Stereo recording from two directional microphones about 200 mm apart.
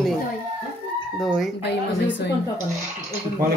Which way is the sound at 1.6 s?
60° left (ahead or behind).